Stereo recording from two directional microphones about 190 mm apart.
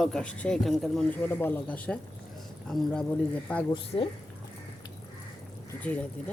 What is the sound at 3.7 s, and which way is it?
Speech, 30° left (ahead or behind).